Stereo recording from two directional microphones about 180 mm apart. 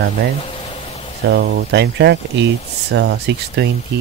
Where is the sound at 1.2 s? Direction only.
70° right (ahead or behind).